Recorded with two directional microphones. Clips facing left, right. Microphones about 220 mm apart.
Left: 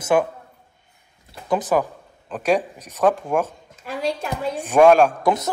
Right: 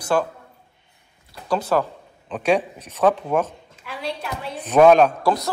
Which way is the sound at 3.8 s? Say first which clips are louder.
Left 5 dB; 45° left (ahead or behind).